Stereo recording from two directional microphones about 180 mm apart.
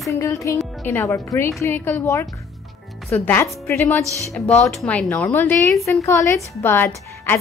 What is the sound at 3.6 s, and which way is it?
Speech, 15° left (ahead or behind).